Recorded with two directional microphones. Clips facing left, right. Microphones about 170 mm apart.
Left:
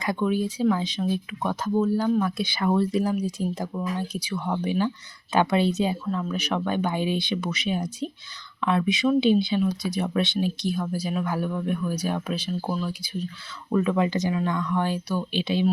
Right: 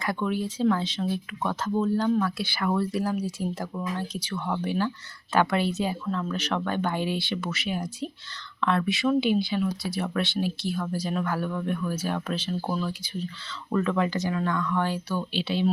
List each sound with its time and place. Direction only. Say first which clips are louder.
0.0 s speech: left 3 dB; 15° left (ahead or behind)